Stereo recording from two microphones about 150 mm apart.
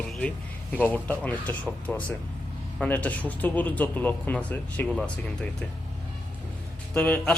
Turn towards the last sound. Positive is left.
turn(degrees=10)  # may be behind; listen again after turning